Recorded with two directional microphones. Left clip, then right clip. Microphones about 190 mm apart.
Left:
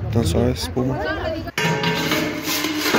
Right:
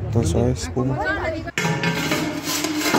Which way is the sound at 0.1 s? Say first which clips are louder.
Left 1 dB; 20° right (ahead or behind).